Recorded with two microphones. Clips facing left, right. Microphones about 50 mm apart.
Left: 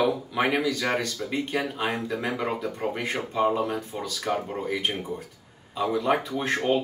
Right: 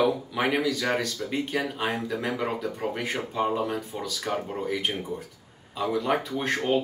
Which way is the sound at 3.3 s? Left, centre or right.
Centre.